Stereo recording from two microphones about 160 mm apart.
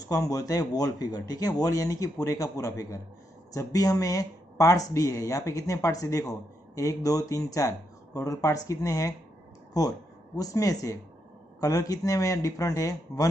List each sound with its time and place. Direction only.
0.1 s speech: 20° left (ahead or behind)